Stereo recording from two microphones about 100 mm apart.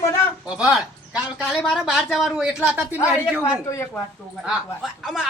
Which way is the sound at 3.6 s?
30° left (ahead or behind).